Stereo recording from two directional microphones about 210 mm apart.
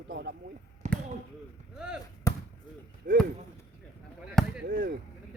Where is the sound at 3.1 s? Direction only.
50° right (ahead or behind).